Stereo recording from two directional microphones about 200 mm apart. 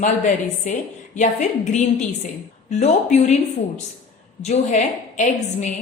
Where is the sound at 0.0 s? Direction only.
40° left (ahead or behind).